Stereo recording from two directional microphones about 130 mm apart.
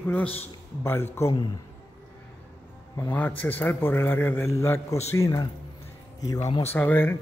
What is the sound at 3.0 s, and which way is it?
A man's voice, 15° left (ahead or behind).